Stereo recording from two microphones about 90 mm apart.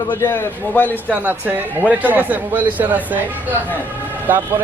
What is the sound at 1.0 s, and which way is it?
Speech, 20° right (ahead or behind).